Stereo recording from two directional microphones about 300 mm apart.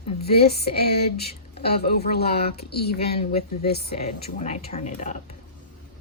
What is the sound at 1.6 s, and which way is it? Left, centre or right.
A woman's voice, left.